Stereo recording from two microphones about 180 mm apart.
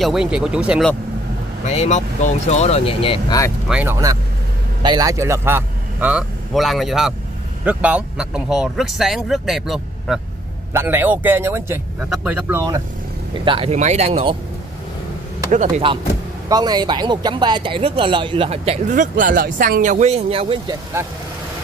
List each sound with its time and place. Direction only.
0.0 s speech: 5° right (ahead or behind)
1.7 s speech: 40° left (ahead or behind)
3.6 s a man's voice: 10° right (ahead or behind)
10.7 s speech: 10° right (ahead or behind)
13.5 s speech: 35° right (ahead or behind)
15.8 s speech: 30° right (ahead or behind)
19.1 s speech: 50° right (ahead or behind); by 20.7 s 30° right (ahead or behind)
21.0 s speech: 10° right (ahead or behind)